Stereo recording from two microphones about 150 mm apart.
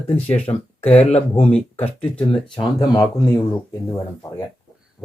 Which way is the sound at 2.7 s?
25° left (ahead or behind).